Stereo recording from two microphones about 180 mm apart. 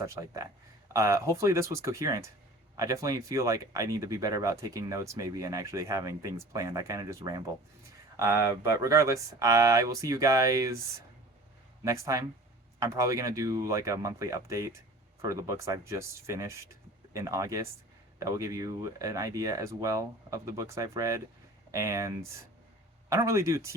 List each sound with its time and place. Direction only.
0.0 s speech: 15° right (ahead or behind)
11.9 s speech: 15° right (ahead or behind)